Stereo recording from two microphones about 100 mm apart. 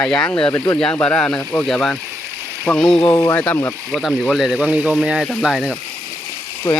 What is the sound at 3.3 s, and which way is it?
Speech, 20° left (ahead or behind).